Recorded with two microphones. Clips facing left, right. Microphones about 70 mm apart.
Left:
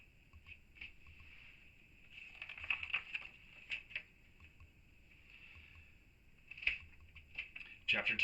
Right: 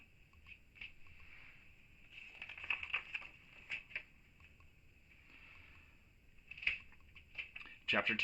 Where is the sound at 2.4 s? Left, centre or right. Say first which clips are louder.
Even; centre.